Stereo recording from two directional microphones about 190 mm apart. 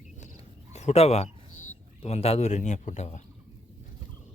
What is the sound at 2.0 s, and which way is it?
A man's voice, 30° left (ahead or behind).